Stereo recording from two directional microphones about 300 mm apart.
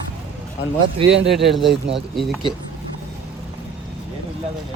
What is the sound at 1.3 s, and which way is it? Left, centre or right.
A man's voice, centre.